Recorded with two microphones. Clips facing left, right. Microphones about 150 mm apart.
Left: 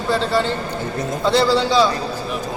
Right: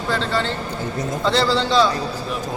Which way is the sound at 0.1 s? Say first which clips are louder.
Left 4 dB; 10° left (ahead or behind).